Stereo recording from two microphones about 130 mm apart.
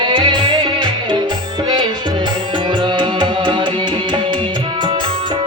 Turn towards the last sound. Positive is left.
turn(degrees=-35)  # may be behind; listen again after turning